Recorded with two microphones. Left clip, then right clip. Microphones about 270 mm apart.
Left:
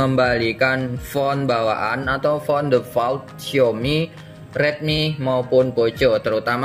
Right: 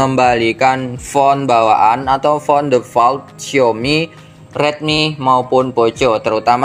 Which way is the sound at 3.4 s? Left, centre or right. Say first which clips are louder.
Right 5 dB; centre.